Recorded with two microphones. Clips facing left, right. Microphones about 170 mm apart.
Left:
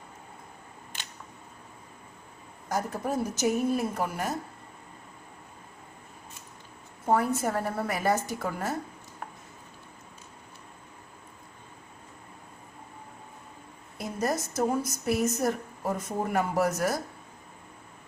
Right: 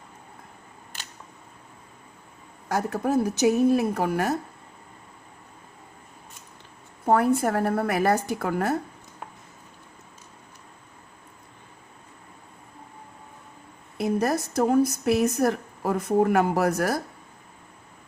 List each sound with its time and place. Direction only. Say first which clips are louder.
2.6 s a woman's voice: right 5 dB; 65° right (ahead or behind)
7.0 s a woman's voice: right 5 dB; 60° right (ahead or behind)
14.0 s a woman's voice: right 6 dB; 65° right (ahead or behind)